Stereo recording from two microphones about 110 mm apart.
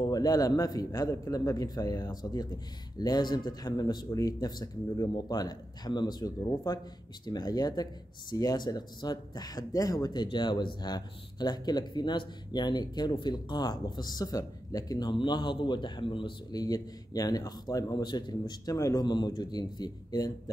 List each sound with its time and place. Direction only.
0.0 s speech: 35° left (ahead or behind)
16.5 s speech: 35° left (ahead or behind)
19.0 s speech: 45° left (ahead or behind)